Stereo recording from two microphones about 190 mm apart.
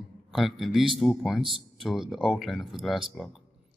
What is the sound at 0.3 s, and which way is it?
A man's voice, centre (ahead or behind).